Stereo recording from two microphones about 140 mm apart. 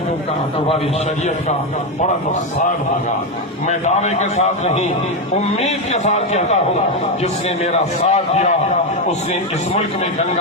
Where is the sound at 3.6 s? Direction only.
55° left (ahead or behind).